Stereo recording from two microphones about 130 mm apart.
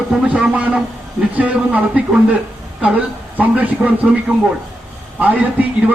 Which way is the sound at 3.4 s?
10° right (ahead or behind).